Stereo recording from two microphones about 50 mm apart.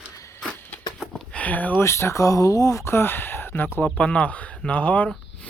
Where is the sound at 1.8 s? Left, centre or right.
Left.